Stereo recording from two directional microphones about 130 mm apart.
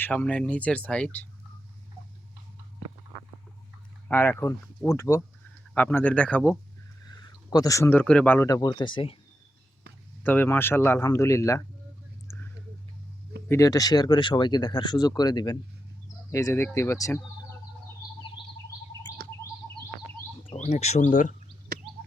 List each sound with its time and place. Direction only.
0.0 s speech: 10° left (ahead or behind)
4.1 s speech: 15° left (ahead or behind)
7.0 s speech: 30° left (ahead or behind); by 8.4 s 15° left (ahead or behind)
8.4 s speech: 30° left (ahead or behind)
10.2 s speech: 15° left (ahead or behind)
13.5 s speech: 25° left (ahead or behind)
16.3 s speech: 20° left (ahead or behind)
18.3 s bird: 40° left (ahead or behind)
20.5 s speech: 55° left (ahead or behind); by 21.3 s 80° left